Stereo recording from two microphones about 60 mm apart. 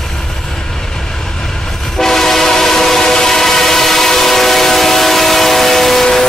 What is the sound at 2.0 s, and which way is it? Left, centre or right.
Train, centre.